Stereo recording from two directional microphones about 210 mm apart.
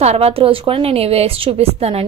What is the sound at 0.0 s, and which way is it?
A woman's voice, 30° right (ahead or behind).